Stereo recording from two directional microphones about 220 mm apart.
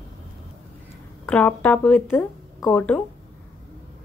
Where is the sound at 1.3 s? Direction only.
5° left (ahead or behind).